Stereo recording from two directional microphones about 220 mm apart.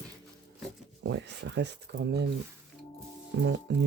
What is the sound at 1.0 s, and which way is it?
Speech, 55° right (ahead or behind).